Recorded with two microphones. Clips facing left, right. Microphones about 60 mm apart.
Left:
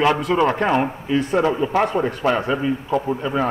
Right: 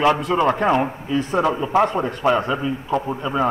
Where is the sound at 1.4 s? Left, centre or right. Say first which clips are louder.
Right 1 dB; centre.